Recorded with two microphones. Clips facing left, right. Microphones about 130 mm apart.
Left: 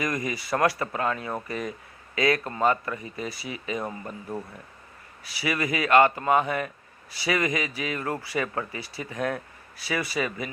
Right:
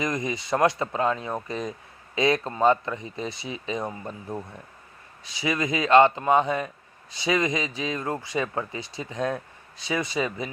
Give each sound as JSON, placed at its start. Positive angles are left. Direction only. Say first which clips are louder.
{"t": 0.0, "sound": "speech", "louder": "right 1 dB", "side_deg": -20}